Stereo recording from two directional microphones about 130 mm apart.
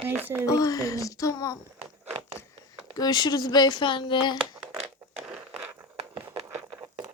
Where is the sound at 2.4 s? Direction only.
55° left (ahead or behind).